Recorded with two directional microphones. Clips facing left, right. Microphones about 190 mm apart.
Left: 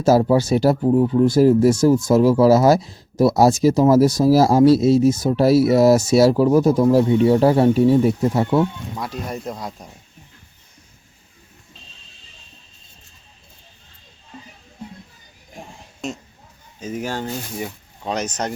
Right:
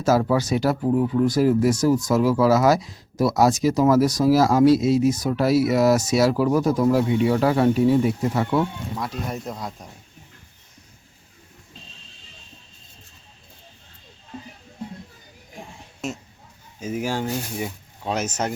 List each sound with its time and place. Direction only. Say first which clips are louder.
0.0 s speech: left 5 dB; 30° left (ahead or behind)
9.0 s speech: left 2 dB; centre (ahead or behind)
16.0 s speech: left 1 dB; 5° right (ahead or behind)